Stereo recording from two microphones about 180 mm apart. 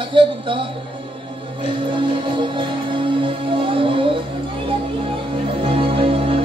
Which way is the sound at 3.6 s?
30° right (ahead or behind).